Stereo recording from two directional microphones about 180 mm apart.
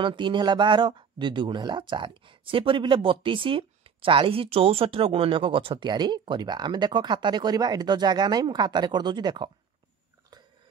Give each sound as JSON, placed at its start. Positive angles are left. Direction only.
{"t": 0.0, "sound": "speech", "side_deg": -25}